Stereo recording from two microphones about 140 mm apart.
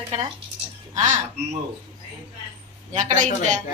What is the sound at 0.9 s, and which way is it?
Speech, 60° right (ahead or behind).